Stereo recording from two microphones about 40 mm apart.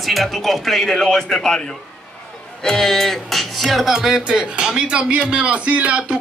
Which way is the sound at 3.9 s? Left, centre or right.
Centre.